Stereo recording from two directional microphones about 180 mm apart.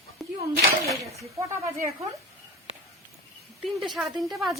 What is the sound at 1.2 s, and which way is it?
Speech, 15° right (ahead or behind).